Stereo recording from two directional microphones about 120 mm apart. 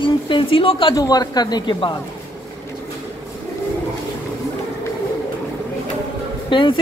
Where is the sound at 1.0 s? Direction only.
35° left (ahead or behind).